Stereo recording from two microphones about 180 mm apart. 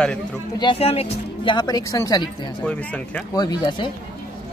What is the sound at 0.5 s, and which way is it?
Speech, 30° left (ahead or behind).